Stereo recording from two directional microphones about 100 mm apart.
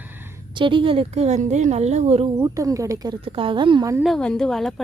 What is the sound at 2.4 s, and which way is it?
Speech, 35° right (ahead or behind).